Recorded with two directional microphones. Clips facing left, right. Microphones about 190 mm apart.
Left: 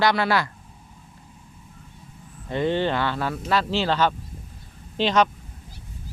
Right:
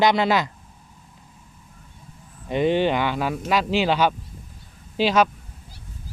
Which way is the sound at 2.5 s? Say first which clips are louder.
Right 3 dB; 15° right (ahead or behind).